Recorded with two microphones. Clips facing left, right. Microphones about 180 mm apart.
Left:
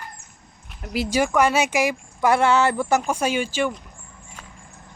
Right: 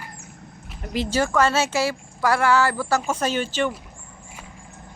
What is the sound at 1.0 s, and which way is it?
Speech, 15° left (ahead or behind).